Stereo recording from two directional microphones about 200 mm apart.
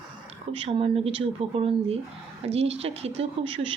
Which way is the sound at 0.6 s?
30° right (ahead or behind).